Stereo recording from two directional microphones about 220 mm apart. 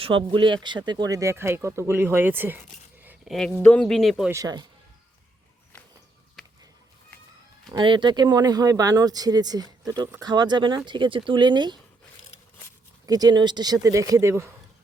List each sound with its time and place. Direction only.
0.0 s speech: 25° right (ahead or behind)
3.0 s a sound: 5° right (ahead or behind)
3.6 s speech: 5° left (ahead or behind)
4.3 s speech: 15° right (ahead or behind)
7.7 s speech: 20° right (ahead or behind)
13.1 s speech: 15° right (ahead or behind)